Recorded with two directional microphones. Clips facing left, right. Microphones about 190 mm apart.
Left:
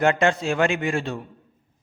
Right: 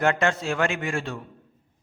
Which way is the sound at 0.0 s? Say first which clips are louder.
Left 3 dB; 20° left (ahead or behind).